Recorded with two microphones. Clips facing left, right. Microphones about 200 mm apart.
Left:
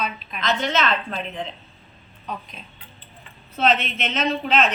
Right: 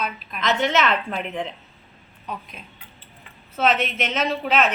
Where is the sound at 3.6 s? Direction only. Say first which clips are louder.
Even; 10° right (ahead or behind).